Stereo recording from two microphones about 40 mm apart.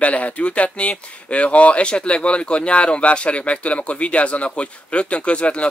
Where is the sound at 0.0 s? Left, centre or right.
Left.